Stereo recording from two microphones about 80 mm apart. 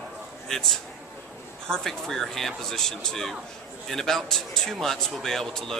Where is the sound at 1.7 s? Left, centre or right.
Centre.